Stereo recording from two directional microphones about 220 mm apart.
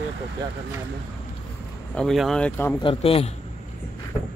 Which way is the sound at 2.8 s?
25° left (ahead or behind).